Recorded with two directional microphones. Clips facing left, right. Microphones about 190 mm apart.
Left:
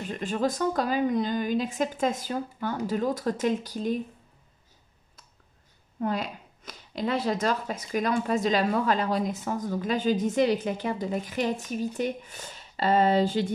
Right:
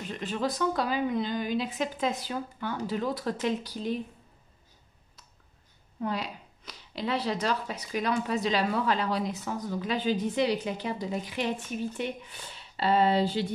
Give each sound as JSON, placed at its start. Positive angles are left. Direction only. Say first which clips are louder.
{"t": 0.2, "sound": "speech", "louder": "left 3 dB", "side_deg": 45}
{"t": 5.9, "sound": "speech", "louder": "left 3 dB", "side_deg": 50}